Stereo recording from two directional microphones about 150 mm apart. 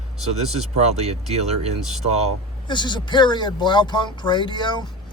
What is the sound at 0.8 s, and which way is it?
Speech, 45° right (ahead or behind).